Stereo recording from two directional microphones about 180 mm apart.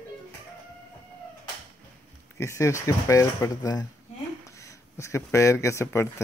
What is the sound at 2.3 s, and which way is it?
Speech, 15° left (ahead or behind).